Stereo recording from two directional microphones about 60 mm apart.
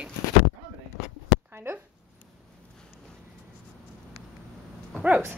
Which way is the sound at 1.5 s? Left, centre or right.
Right.